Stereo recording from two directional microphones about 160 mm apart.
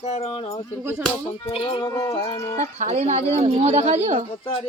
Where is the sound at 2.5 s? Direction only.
45° right (ahead or behind).